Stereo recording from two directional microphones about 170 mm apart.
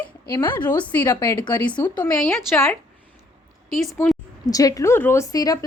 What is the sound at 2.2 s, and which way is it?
Speech, centre (ahead or behind).